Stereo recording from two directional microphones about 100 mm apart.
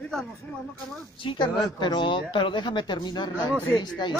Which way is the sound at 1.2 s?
50° left (ahead or behind).